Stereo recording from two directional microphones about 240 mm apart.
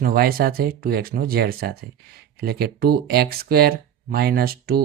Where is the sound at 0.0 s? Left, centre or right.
Right.